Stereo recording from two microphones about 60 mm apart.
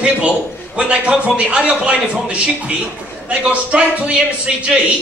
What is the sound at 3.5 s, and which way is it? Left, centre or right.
A man's voice, right.